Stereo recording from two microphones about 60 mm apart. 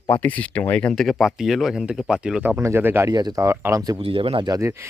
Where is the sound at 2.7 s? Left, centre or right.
Right.